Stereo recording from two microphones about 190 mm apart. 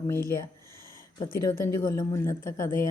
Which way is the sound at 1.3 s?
50° left (ahead or behind).